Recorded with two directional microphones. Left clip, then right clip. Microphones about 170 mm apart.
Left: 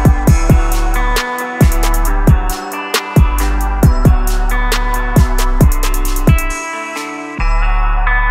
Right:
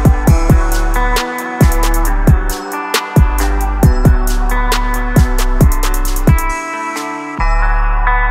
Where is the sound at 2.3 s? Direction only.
Centre (ahead or behind).